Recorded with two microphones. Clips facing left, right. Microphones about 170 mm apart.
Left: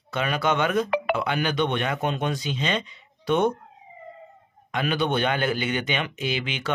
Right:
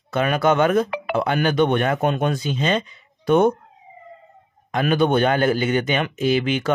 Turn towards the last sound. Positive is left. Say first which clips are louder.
# right 9 dB
turn(degrees=-45)  # may be behind; listen again after turning